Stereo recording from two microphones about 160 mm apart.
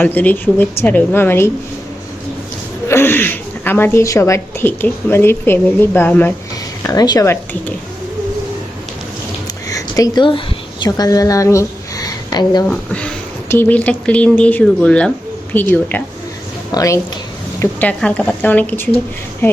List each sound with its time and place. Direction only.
0.0 s speech: 10° left (ahead or behind)
2.9 s speech: 15° left (ahead or behind)
6.8 s speech: 25° left (ahead or behind)
9.6 s a sound: 20° left (ahead or behind)
10.8 s a woman's voice: 25° left (ahead or behind)
12.6 s speech: 5° left (ahead or behind)
17.6 s speech: 10° left (ahead or behind)